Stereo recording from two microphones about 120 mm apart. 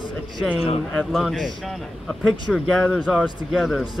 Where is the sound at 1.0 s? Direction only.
Centre (ahead or behind).